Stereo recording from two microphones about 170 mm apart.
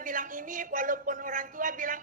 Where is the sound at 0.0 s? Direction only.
50° right (ahead or behind).